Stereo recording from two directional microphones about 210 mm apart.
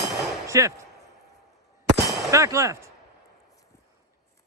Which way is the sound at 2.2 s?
15° right (ahead or behind).